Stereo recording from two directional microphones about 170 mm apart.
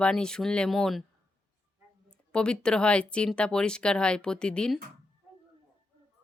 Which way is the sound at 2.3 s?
5° left (ahead or behind).